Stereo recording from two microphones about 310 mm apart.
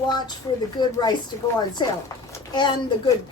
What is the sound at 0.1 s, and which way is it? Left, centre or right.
A woman's voice, centre.